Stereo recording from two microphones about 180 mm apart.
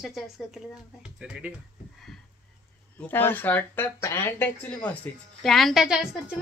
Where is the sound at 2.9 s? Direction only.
10° left (ahead or behind).